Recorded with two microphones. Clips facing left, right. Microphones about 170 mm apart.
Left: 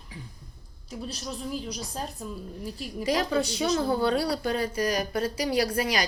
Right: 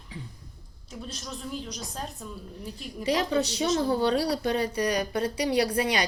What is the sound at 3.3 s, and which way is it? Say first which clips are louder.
Speech: even; 35° right (ahead or behind).